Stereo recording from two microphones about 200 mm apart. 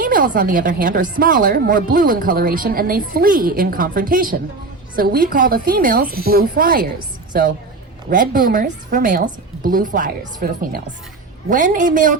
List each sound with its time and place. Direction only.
0.0 s a woman's voice: 45° right (ahead or behind)